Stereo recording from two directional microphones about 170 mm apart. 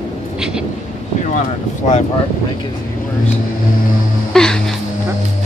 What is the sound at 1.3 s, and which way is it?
Boat, 45° left (ahead or behind).